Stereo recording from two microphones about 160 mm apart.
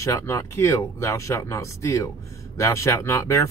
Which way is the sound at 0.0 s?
20° left (ahead or behind).